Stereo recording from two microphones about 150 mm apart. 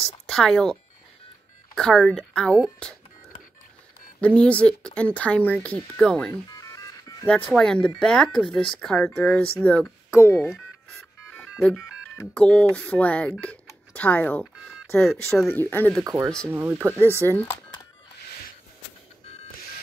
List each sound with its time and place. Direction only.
0.0 s speech: 5° left (ahead or behind)
1.8 s speech: 5° left (ahead or behind)
4.2 s speech: 10° left (ahead or behind)
6.5 s music: 20° left (ahead or behind)
7.2 s speech: 10° left (ahead or behind)
10.5 s music: 5° left (ahead or behind)
12.4 s speech: 5° left (ahead or behind)
13.4 s telephone dialing: 10° left (ahead or behind)
15.5 s speech: 15° left (ahead or behind)
16.0 s speech: 25° right (ahead or behind)
19.2 s a sound: 40° left (ahead or behind)